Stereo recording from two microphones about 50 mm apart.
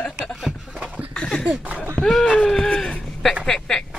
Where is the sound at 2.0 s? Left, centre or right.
Centre.